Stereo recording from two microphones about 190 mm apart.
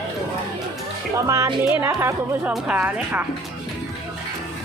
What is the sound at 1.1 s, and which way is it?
Speech, 15° right (ahead or behind).